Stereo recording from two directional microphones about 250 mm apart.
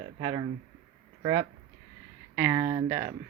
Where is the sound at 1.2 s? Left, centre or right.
Centre.